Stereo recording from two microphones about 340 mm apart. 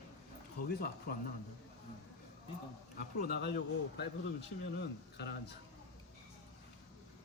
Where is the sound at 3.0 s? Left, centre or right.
Left.